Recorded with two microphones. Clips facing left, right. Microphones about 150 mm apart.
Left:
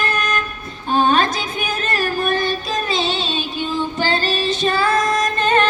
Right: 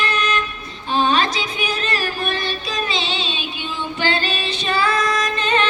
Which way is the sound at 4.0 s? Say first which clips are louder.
Even; 40° left (ahead or behind).